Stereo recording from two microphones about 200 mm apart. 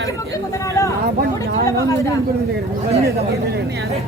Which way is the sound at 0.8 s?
15° left (ahead or behind).